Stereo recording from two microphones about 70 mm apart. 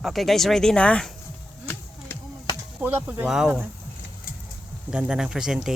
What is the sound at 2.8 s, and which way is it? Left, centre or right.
Speech, right.